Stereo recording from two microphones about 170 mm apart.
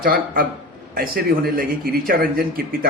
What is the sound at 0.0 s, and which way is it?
A man's voice, 60° right (ahead or behind).